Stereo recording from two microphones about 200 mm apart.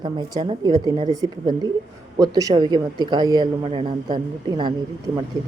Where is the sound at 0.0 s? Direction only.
20° right (ahead or behind).